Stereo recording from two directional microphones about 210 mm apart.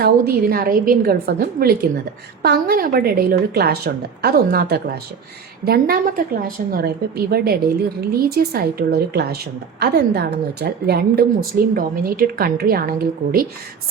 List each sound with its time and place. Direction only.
0.0 s a woman's voice: 45° right (ahead or behind)